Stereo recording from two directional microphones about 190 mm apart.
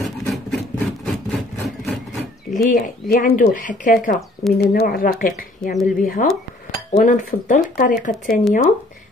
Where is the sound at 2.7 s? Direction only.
45° left (ahead or behind).